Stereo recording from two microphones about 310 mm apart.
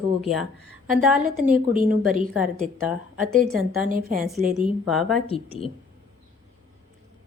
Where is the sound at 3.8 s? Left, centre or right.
Right.